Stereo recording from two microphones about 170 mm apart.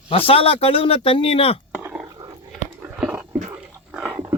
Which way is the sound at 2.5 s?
5° right (ahead or behind).